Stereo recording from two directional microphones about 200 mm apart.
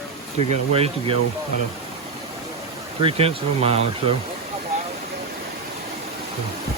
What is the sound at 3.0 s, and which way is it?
Speech, 30° right (ahead or behind).